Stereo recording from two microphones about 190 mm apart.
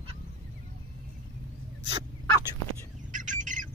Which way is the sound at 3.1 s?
40° right (ahead or behind).